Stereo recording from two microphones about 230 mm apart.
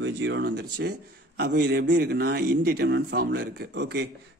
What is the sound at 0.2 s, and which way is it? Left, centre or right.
A man's voice, right.